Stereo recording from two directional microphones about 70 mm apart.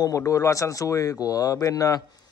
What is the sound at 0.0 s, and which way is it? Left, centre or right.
Speech, left.